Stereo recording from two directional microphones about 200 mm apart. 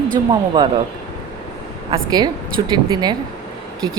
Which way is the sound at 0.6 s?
20° right (ahead or behind).